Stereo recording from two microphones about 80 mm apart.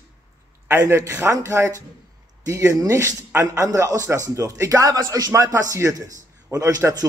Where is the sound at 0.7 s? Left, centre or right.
Right.